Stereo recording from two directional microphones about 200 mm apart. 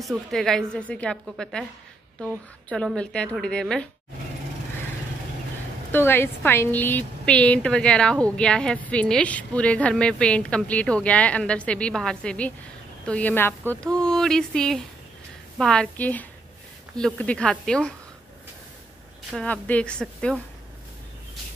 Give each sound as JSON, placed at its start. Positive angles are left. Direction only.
{"t": 0.0, "sound": "a woman's voice", "side_deg": 0}
{"t": 2.7, "sound": "a woman's voice", "side_deg": 5}
{"t": 5.9, "sound": "a woman's voice", "side_deg": 10}
{"t": 19.3, "sound": "a woman's voice", "side_deg": 5}